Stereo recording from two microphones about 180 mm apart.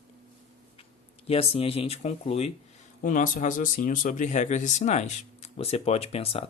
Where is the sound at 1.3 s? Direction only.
35° left (ahead or behind).